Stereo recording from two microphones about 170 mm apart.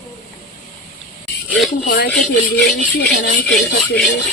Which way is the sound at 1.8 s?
60° left (ahead or behind).